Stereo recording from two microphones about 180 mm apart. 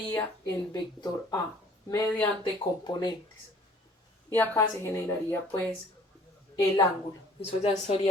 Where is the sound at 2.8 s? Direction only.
25° left (ahead or behind).